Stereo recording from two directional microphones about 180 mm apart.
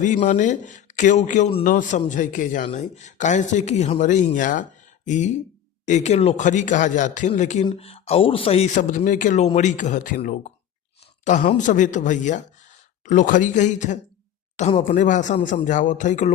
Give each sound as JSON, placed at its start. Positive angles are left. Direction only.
{"t": 0.0, "sound": "a man's voice", "side_deg": 45}